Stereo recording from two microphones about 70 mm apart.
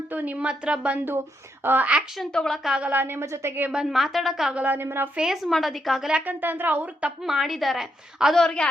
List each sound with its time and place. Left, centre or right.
0.1 s speech: right
2.3 s a woman's voice: centre
2.8 s a woman's voice: right
3.7 s a woman's voice: centre
4.5 s speech: right
5.1 s a woman's voice: centre
6.1 s speech: centre
6.4 s speech: right
7.2 s a woman's voice: centre
8.4 s a woman's voice: centre